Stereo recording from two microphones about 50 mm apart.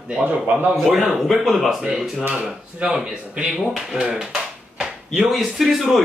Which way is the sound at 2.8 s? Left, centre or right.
Right.